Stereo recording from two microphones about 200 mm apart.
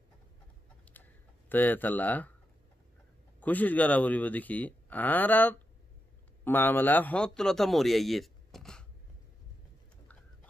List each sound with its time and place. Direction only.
1.0 s a sound: 10° left (ahead or behind)
1.5 s speech: 10° left (ahead or behind)
3.3 s a man's voice: 10° left (ahead or behind)